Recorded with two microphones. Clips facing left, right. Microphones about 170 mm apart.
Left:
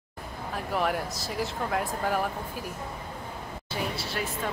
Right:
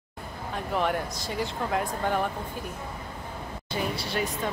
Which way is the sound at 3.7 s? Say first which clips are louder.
Right 3 dB; centre (ahead or behind).